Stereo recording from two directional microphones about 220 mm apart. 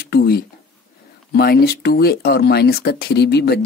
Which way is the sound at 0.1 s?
45° left (ahead or behind).